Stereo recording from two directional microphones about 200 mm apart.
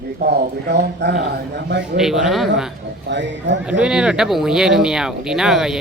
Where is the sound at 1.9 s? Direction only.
Centre (ahead or behind).